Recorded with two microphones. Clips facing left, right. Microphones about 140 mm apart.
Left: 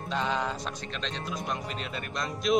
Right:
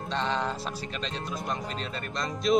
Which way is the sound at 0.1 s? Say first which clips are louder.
Even; 5° left (ahead or behind).